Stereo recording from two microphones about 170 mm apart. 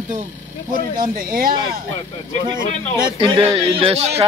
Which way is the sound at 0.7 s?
55° right (ahead or behind).